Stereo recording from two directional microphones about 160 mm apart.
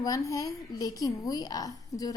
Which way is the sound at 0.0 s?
20° left (ahead or behind).